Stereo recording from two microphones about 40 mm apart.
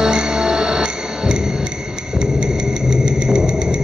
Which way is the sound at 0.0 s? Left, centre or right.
Centre.